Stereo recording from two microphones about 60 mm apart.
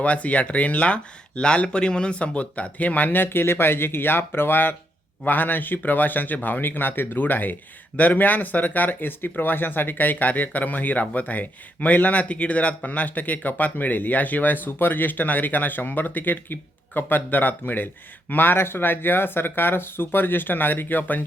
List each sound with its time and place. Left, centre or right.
0.0 s speech: left